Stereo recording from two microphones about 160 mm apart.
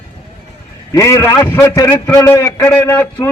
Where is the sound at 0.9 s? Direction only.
20° left (ahead or behind).